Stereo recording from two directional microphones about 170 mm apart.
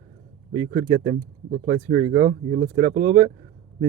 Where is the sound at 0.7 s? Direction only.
35° right (ahead or behind).